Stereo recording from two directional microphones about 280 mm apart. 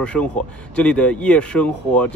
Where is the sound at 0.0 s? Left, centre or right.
Centre.